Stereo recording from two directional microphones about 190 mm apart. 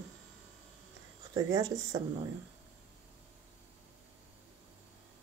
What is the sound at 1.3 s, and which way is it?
Speech, 20° right (ahead or behind).